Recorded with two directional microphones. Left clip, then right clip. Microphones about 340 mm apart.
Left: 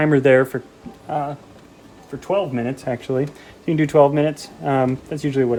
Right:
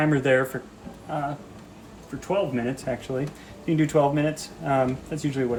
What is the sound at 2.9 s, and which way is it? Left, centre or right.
Speech, left.